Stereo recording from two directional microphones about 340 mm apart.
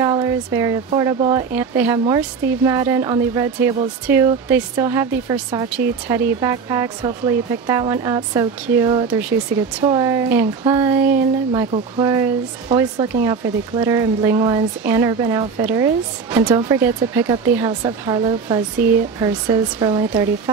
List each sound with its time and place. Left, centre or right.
0.0 s speech: centre